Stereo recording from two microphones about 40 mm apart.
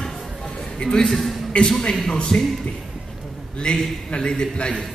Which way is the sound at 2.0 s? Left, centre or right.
Centre.